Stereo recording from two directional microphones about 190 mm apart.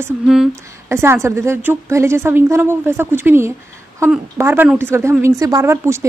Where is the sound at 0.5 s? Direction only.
15° right (ahead or behind).